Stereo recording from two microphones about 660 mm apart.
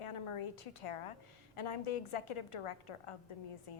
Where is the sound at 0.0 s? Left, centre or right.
Left.